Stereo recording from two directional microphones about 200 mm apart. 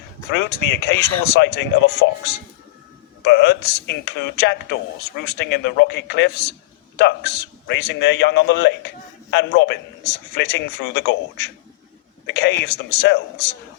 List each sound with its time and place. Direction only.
0.3 s speech: 60° left (ahead or behind)
2.0 s a man's voice: 70° left (ahead or behind)
3.2 s speech: 60° left (ahead or behind)